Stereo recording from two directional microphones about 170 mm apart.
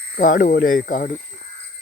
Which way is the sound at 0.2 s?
50° left (ahead or behind).